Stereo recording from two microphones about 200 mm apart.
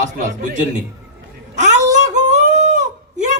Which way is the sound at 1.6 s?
35° right (ahead or behind).